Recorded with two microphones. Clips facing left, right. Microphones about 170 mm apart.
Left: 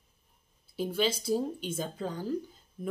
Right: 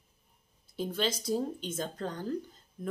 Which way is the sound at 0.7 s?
10° left (ahead or behind).